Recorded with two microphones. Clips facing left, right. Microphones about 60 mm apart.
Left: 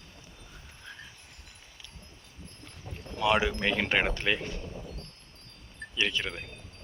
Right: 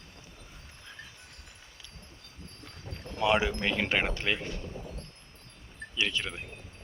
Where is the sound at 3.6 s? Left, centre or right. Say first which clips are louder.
Left 1 dB; centre.